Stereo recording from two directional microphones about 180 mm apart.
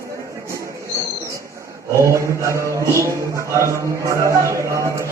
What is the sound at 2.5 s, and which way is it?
A man's voice, 15° right (ahead or behind).